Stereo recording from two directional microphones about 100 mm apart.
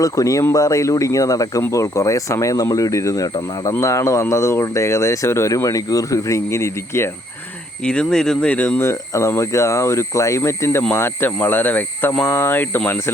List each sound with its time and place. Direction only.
0.0 s speech: 35° left (ahead or behind)
7.9 s speech: 5° left (ahead or behind)
8.8 s speech: 30° left (ahead or behind)